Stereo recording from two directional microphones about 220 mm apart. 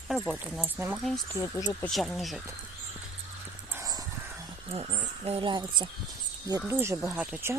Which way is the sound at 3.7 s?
15° right (ahead or behind).